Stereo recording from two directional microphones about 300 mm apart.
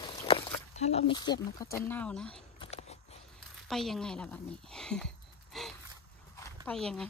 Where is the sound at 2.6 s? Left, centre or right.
Left.